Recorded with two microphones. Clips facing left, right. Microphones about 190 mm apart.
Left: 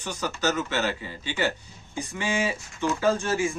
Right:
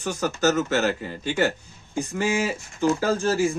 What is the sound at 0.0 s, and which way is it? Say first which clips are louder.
Speech: right 5 dB; 50° right (ahead or behind).